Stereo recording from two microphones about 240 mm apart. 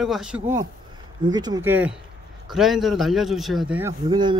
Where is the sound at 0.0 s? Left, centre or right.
Centre.